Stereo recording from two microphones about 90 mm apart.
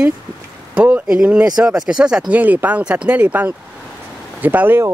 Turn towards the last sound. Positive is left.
turn(degrees=-20)  # may be behind; listen again after turning